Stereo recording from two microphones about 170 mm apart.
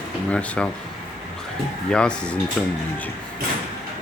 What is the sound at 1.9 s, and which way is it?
Speech, 5° left (ahead or behind).